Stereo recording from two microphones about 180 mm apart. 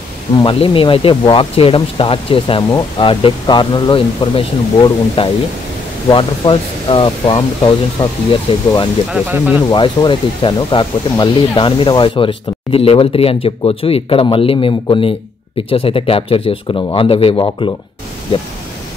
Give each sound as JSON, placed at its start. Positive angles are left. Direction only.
{"t": 0.4, "sound": "speech", "side_deg": 30}
{"t": 9.1, "sound": "speech", "side_deg": -10}
{"t": 9.7, "sound": "speech", "side_deg": 25}